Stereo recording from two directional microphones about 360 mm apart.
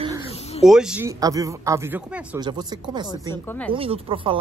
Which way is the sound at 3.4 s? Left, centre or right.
Centre.